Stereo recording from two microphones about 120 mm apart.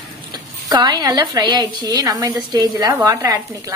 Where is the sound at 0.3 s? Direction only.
35° right (ahead or behind).